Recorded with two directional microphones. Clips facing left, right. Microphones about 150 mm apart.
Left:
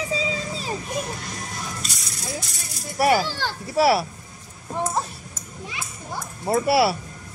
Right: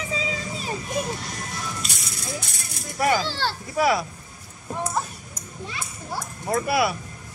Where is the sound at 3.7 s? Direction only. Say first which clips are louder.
Left 3 dB; 30° left (ahead or behind).